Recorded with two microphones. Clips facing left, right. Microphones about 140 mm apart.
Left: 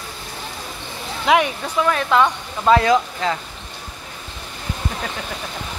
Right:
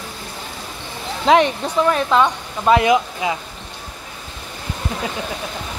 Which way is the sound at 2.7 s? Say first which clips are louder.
Even; 15° right (ahead or behind).